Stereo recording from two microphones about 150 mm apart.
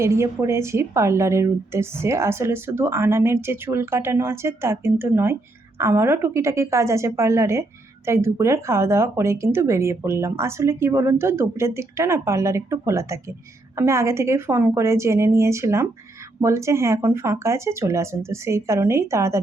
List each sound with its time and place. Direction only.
0.0 s a woman's voice: 20° right (ahead or behind)